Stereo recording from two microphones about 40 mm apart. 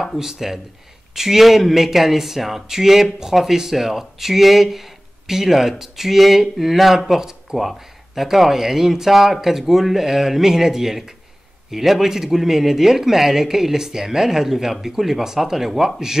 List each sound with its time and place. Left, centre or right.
0.0 s speech: centre